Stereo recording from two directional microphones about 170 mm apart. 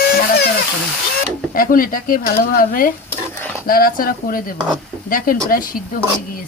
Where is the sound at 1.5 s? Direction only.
55° left (ahead or behind).